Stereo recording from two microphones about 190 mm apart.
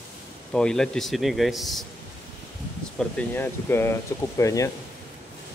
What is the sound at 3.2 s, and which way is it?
Speech, 10° left (ahead or behind).